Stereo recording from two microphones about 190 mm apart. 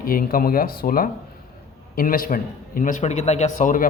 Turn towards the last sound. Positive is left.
turn(degrees=45)  # may be behind; listen again after turning